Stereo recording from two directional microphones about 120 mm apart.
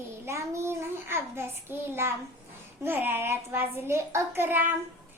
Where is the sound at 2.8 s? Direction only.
15° right (ahead or behind).